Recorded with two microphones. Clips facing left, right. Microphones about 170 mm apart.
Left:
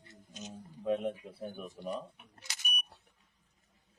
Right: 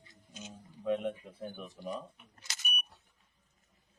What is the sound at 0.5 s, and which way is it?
Speech, 10° left (ahead or behind).